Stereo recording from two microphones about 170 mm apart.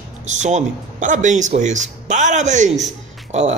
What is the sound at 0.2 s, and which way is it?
Speech, 45° right (ahead or behind).